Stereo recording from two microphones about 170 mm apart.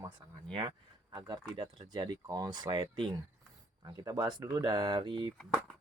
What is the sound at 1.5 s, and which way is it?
Speech, 25° right (ahead or behind).